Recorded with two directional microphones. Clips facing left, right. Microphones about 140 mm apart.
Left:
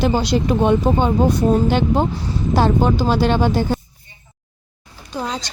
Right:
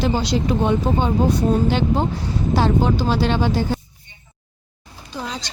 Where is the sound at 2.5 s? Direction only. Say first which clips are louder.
Left 2 dB; 50° left (ahead or behind).